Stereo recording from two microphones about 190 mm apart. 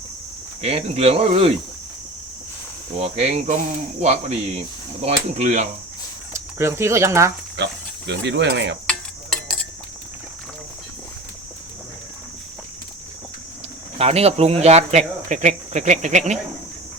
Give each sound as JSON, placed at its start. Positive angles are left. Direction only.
{"t": 0.6, "sound": "speech", "side_deg": -30}
{"t": 3.0, "sound": "speech", "side_deg": -35}
{"t": 6.3, "sound": "speech", "side_deg": -15}
{"t": 7.5, "sound": "speech", "side_deg": -65}
{"t": 8.9, "sound": "a sound", "side_deg": 0}
{"t": 14.0, "sound": "speech", "side_deg": -35}